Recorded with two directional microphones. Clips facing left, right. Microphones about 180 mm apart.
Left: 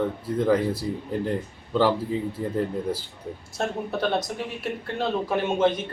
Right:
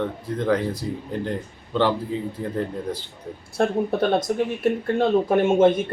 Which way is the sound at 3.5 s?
50° right (ahead or behind).